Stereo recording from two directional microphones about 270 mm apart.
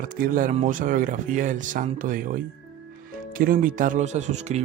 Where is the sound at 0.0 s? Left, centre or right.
Right.